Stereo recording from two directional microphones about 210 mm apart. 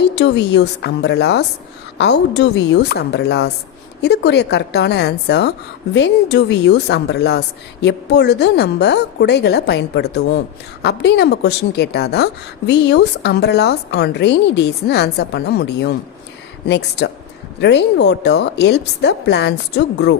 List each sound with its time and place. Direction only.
0.2 s a woman's voice: 55° left (ahead or behind)